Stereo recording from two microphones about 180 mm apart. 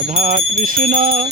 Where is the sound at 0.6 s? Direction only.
50° right (ahead or behind).